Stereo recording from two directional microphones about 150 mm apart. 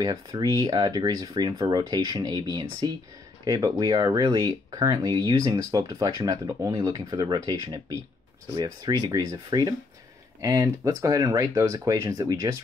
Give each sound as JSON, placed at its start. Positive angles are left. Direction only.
{"t": 0.0, "sound": "speech", "side_deg": -25}